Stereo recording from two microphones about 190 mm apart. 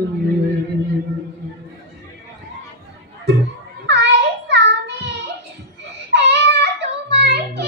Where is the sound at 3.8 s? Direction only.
65° right (ahead or behind).